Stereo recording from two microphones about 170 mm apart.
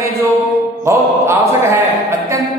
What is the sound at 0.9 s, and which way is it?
A man's voice, 15° right (ahead or behind).